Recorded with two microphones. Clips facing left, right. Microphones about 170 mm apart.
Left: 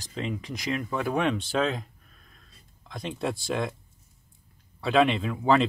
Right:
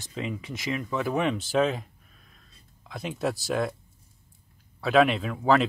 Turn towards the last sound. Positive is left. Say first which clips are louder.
# even
turn(degrees=0)  # may be behind; listen again after turning